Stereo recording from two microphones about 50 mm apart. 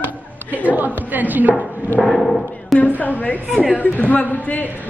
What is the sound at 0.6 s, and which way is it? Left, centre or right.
Speech, right.